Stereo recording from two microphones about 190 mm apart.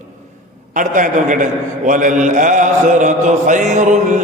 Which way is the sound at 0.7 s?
40° right (ahead or behind).